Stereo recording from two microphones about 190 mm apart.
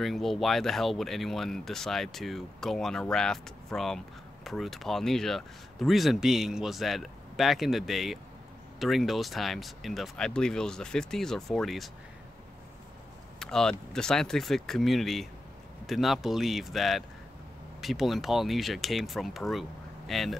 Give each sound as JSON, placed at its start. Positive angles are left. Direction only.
{"t": 0.0, "sound": "speech", "side_deg": 0}
{"t": 13.4, "sound": "speech", "side_deg": 5}